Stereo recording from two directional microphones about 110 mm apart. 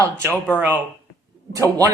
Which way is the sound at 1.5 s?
30° right (ahead or behind).